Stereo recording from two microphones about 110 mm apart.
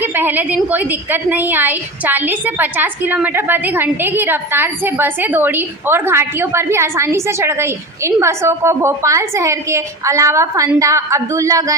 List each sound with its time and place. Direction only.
0.0 s a woman's voice: 15° right (ahead or behind)